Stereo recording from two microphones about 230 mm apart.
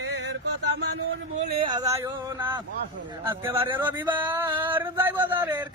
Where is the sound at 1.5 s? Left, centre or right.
Right.